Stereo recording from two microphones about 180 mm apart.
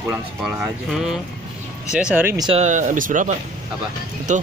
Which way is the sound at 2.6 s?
45° right (ahead or behind).